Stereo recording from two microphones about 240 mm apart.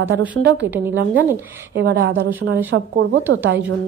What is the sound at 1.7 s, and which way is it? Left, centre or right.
A woman's voice, right.